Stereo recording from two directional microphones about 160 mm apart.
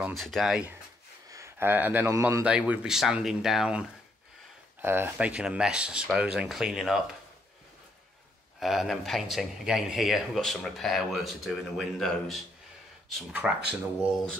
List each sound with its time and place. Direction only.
0.0 s speech: centre (ahead or behind)
1.3 s a man's voice: 15° right (ahead or behind)
2.4 s speech: 5° right (ahead or behind)
4.8 s speech: 15° right (ahead or behind)
8.5 s speech: centre (ahead or behind)